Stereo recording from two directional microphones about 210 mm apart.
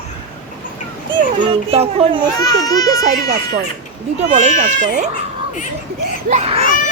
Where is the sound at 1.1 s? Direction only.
25° right (ahead or behind).